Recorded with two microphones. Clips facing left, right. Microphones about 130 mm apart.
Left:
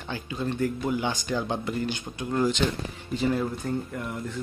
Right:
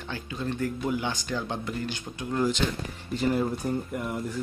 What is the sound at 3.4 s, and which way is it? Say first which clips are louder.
Speech: right 1 dB; 20° right (ahead or behind).